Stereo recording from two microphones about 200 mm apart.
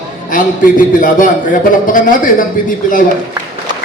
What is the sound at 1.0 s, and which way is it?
Speech, 40° left (ahead or behind).